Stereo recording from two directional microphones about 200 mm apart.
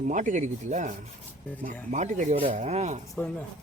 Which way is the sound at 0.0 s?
40° right (ahead or behind).